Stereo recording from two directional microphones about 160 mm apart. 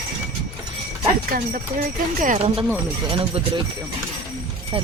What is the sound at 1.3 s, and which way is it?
Speech, 65° right (ahead or behind).